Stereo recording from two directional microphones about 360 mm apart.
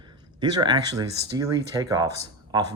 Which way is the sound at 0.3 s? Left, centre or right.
Centre.